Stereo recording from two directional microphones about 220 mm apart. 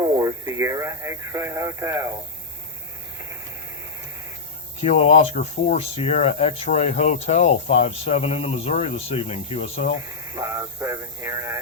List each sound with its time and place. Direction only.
0.2 s speech: 15° right (ahead or behind)
4.8 s speech: 30° left (ahead or behind)
10.3 s speech: 15° right (ahead or behind)